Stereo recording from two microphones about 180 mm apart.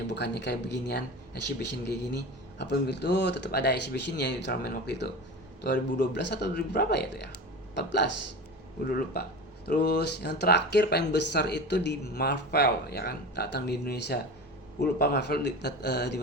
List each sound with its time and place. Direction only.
0.1 s speech: 70° left (ahead or behind)
8.9 s speech: 55° left (ahead or behind)